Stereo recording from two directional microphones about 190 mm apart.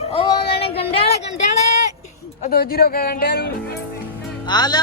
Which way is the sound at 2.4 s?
50° left (ahead or behind).